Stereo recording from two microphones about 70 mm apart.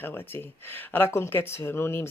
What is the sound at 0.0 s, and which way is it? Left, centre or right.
Speech, left.